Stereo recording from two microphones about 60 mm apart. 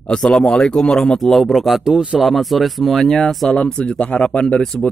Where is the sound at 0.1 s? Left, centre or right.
Centre.